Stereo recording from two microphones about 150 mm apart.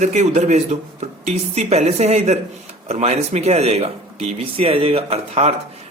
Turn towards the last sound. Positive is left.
turn(degrees=-45)  # may be behind; listen again after turning